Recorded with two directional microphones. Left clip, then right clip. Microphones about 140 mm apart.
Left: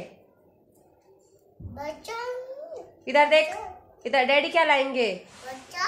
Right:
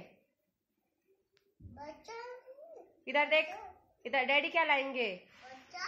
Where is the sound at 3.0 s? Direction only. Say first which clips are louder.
Left 11 dB; 15° right (ahead or behind).